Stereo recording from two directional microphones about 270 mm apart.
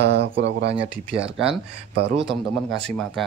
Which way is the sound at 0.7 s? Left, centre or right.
Right.